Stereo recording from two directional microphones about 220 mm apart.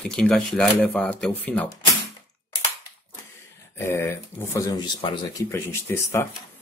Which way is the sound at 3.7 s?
10° left (ahead or behind).